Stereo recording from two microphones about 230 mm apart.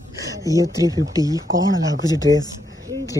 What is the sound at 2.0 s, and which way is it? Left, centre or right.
Speech, centre.